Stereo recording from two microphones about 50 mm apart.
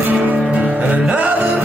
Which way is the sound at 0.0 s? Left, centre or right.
Right.